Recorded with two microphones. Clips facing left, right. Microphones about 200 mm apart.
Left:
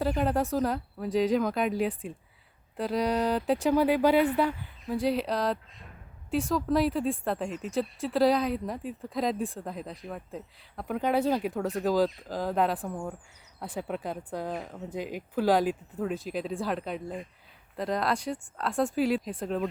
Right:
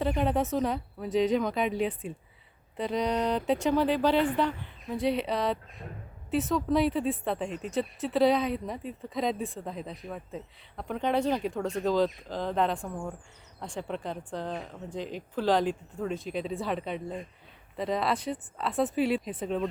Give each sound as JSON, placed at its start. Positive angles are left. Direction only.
{"t": 0.0, "sound": "speech", "side_deg": 5}